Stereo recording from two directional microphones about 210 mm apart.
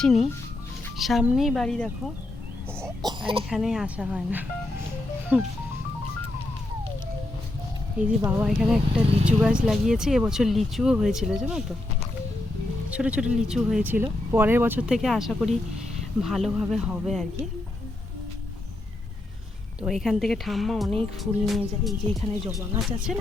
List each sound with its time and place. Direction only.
0.0 s speech: centre (ahead or behind)
2.8 s speech: 20° right (ahead or behind)
3.5 s speech: centre (ahead or behind)
7.9 s speech: 10° right (ahead or behind)
12.9 s speech: 5° right (ahead or behind)
19.8 s speech: centre (ahead or behind)